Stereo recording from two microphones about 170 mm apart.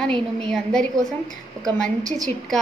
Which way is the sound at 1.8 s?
50° right (ahead or behind).